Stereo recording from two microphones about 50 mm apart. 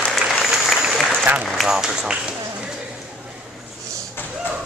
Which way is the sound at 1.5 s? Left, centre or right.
Centre.